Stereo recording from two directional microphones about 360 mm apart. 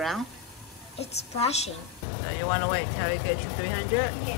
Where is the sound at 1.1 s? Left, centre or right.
Centre.